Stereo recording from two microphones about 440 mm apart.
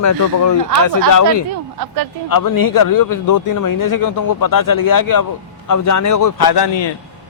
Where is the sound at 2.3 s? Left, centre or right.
Left.